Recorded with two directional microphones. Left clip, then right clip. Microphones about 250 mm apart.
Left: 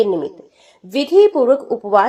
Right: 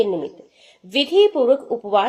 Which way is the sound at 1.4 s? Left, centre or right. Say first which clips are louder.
Left 3 dB; left.